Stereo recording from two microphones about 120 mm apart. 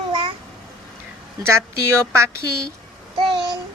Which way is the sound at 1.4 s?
20° right (ahead or behind).